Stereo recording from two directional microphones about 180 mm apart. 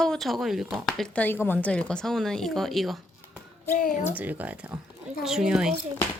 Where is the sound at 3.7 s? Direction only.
50° left (ahead or behind).